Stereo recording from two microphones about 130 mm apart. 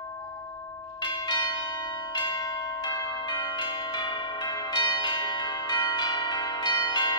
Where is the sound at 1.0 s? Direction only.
35° left (ahead or behind).